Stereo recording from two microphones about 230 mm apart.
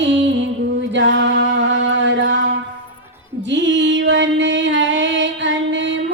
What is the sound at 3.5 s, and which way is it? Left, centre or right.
Music, right.